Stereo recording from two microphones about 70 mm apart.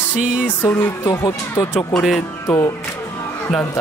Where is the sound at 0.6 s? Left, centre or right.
Left.